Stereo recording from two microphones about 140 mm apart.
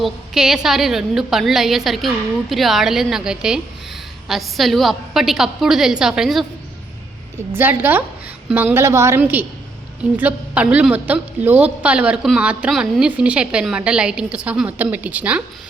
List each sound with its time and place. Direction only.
0.0 s a woman's voice: 5° right (ahead or behind)
7.5 s a woman's voice: 15° right (ahead or behind)